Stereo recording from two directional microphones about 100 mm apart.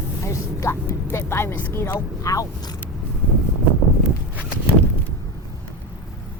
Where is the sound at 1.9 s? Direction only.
35° left (ahead or behind).